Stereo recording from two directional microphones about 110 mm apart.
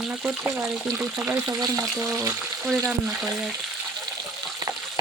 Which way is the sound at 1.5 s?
35° right (ahead or behind).